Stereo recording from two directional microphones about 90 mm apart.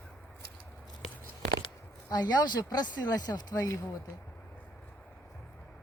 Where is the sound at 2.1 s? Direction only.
50° left (ahead or behind).